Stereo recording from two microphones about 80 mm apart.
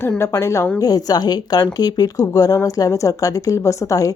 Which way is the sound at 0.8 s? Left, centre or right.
Left.